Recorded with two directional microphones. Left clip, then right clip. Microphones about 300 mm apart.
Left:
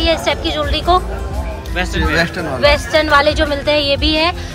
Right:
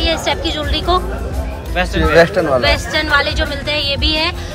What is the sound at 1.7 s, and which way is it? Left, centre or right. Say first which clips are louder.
Speech: right 5 dB; right.